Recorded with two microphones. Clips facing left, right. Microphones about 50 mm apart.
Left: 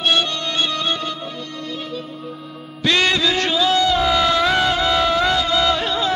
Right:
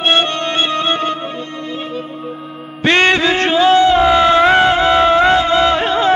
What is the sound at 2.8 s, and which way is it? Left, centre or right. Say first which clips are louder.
Music: right 6 dB; right.